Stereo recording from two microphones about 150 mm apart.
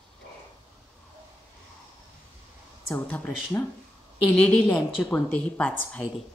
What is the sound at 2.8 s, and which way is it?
A woman's voice, 10° left (ahead or behind).